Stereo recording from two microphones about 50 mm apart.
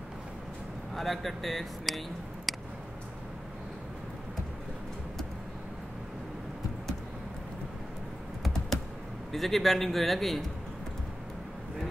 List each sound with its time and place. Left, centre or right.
0.9 s speech: centre
9.3 s speech: centre